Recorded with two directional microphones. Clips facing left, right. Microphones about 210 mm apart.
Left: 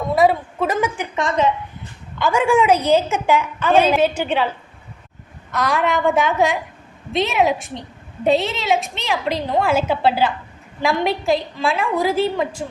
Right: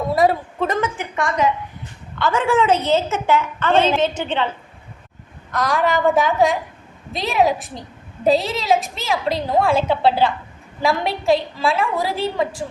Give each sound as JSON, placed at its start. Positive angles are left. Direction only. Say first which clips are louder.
{"t": 0.1, "sound": "a woman's voice", "louder": "left 2 dB", "side_deg": 0}
{"t": 1.1, "sound": "a woman's voice", "louder": "even", "side_deg": 20}
{"t": 5.5, "sound": "a woman's voice", "louder": "even", "side_deg": 0}